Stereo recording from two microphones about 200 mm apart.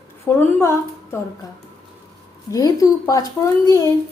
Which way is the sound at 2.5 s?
15° left (ahead or behind).